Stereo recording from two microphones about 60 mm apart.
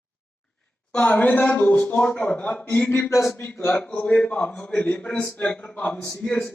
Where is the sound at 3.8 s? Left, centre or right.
Left.